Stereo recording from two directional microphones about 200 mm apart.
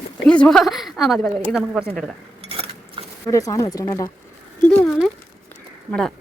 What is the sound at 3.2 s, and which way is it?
Speech, 15° left (ahead or behind).